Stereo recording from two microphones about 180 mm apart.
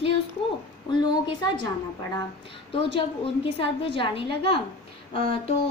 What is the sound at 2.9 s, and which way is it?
A woman's voice, 30° left (ahead or behind).